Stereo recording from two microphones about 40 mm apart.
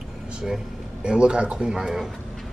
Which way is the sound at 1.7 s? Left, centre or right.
Centre.